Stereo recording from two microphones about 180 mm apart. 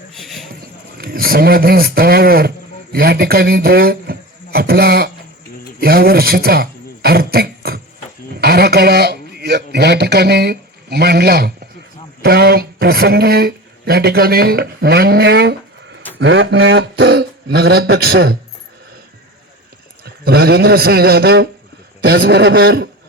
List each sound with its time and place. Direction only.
0.1 s a sound: centre (ahead or behind)
0.9 s a man's voice: 55° right (ahead or behind)
16.1 s speech: 90° right; by 18.3 s 60° right (ahead or behind)
20.1 s speech: 60° right (ahead or behind)